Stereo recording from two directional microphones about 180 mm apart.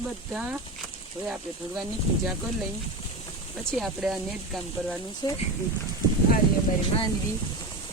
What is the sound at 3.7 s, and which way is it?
Speech, centre (ahead or behind).